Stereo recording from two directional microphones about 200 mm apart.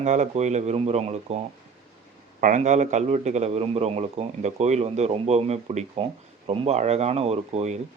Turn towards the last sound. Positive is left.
turn(degrees=-35)  # may be behind; listen again after turning